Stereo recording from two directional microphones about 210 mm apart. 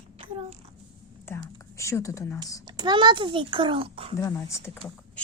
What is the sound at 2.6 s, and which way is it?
A child's voice, 20° right (ahead or behind).